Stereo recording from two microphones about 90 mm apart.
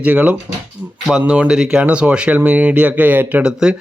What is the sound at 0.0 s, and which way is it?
A man's voice, 15° right (ahead or behind).